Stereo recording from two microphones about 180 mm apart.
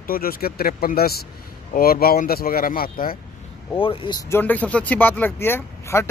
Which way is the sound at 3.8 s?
30° left (ahead or behind).